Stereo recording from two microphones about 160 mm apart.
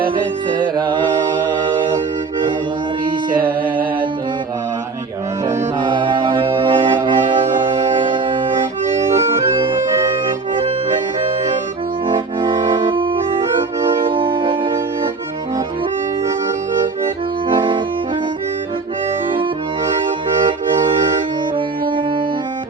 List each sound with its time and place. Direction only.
0.5 s music: 30° right (ahead or behind)
5.8 s mantra: 30° right (ahead or behind)
9.1 s organ: 15° right (ahead or behind)
12.0 s accordion: 30° right (ahead or behind)
13.9 s accordion: 30° right (ahead or behind)
17.5 s accordion: 30° right (ahead or behind)